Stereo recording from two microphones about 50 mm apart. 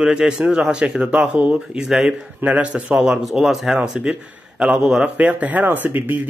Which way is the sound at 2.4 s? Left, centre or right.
Right.